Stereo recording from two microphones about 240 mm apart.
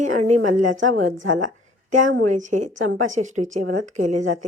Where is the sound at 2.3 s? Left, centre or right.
Right.